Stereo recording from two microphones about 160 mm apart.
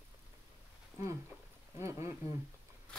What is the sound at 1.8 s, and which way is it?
Speech, 20° right (ahead or behind).